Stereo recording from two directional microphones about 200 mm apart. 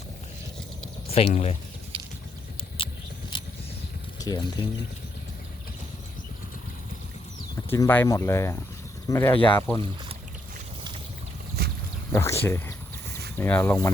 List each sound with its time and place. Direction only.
1.1 s speech: 30° left (ahead or behind)
1.9 s vehicle: 25° right (ahead or behind)
2.7 s vehicle: 25° left (ahead or behind)
4.2 s speech: 20° left (ahead or behind)
7.7 s speech: 10° left (ahead or behind)
12.1 s speech: 10° left (ahead or behind)